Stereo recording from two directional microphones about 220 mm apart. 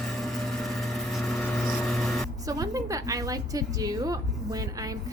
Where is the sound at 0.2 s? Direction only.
Centre (ahead or behind).